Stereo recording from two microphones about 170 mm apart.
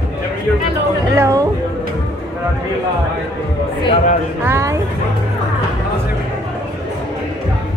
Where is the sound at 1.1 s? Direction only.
15° right (ahead or behind).